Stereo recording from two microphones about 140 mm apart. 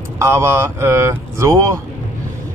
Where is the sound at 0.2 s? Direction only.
20° right (ahead or behind).